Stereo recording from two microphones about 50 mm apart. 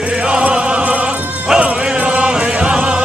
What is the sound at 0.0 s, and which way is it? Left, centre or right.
Music, right.